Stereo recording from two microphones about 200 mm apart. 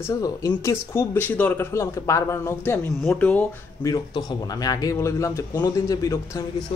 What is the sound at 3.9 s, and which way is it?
Speech, 20° left (ahead or behind).